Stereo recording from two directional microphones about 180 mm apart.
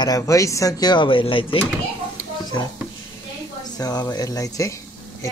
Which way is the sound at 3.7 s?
20° left (ahead or behind).